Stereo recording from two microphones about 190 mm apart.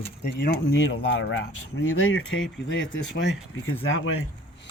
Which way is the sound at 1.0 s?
85° left.